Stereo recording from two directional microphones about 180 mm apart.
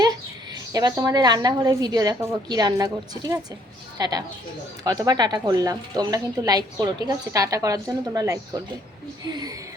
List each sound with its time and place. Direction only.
0.5 s a woman's voice: 20° right (ahead or behind)